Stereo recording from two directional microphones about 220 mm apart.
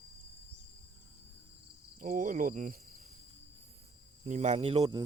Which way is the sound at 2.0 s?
35° right (ahead or behind).